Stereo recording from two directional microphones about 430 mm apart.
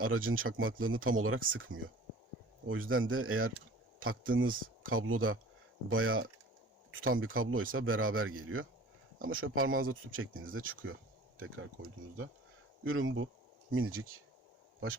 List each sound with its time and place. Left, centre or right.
0.0 s speech: right
12.8 s speech: right